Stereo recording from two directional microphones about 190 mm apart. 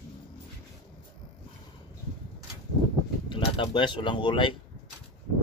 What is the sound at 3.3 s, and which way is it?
Speech, 25° left (ahead or behind).